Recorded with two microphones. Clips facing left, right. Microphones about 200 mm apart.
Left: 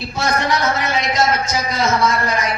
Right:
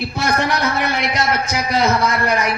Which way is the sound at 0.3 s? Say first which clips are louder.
Left 1 dB; 60° right (ahead or behind).